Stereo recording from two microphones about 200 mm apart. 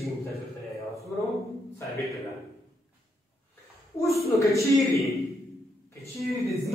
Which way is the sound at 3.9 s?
15° left (ahead or behind).